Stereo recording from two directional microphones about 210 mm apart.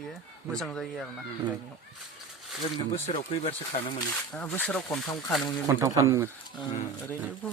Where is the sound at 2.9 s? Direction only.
25° left (ahead or behind).